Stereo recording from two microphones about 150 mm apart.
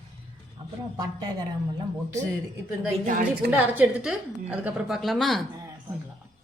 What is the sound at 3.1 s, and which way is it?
Speech, 60° right (ahead or behind).